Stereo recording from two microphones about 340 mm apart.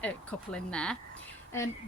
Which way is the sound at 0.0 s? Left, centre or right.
Centre.